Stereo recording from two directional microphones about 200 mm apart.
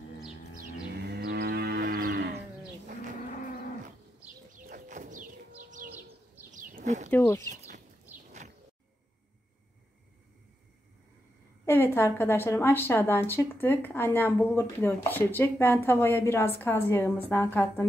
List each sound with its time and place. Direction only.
1.1 s moo: 55° right (ahead or behind)
4.6 s bird: 40° right (ahead or behind)
6.5 s a sound: 40° right (ahead or behind)
7.1 s a woman's voice: 10° left (ahead or behind)
11.6 s a woman's voice: 10° left (ahead or behind)